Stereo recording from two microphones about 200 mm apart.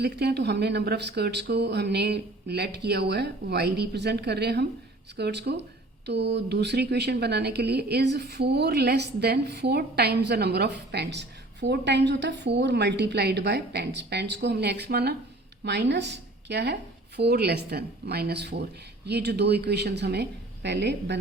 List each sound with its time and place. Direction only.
0.0 s a woman's voice: 55° right (ahead or behind)